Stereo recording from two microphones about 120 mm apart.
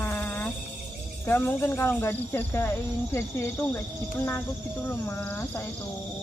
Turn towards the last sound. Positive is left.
turn(degrees=15)  # may be behind; listen again after turning